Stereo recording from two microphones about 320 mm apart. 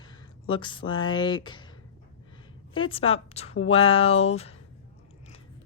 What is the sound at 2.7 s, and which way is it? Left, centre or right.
A woman's voice, centre.